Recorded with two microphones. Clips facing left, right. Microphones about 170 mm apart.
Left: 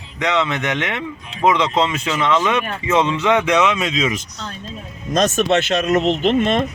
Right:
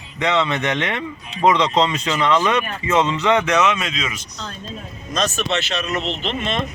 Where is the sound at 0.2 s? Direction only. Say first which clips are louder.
Even; centre (ahead or behind); by 4.0 s 20° left (ahead or behind).